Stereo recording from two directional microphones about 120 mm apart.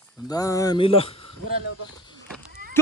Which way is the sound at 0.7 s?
50° left (ahead or behind).